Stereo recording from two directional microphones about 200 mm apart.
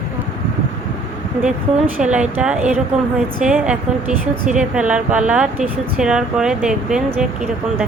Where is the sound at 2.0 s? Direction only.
5° right (ahead or behind).